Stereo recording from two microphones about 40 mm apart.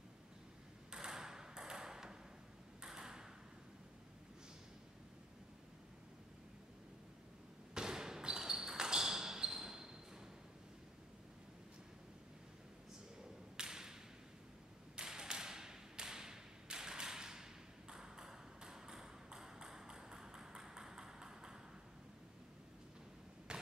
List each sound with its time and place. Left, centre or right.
0.9 s ping: centre
7.7 s basketball bounce: centre
13.6 s tap: centre
15.0 s tap: centre
23.5 s a sound: right